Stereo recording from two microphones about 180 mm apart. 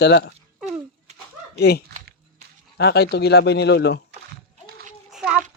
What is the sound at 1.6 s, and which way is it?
Speech, 65° left (ahead or behind).